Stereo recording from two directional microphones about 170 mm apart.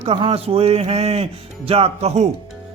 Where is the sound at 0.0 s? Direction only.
35° right (ahead or behind).